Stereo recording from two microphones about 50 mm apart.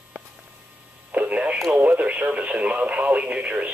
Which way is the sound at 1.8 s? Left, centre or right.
Right.